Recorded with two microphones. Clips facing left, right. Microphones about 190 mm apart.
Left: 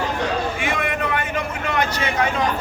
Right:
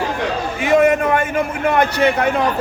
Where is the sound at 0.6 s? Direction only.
40° right (ahead or behind).